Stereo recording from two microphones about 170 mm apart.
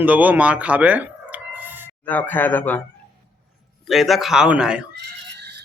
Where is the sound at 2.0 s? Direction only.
10° left (ahead or behind).